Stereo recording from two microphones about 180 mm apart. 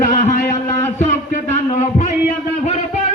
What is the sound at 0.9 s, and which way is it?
A man's voice, 40° left (ahead or behind).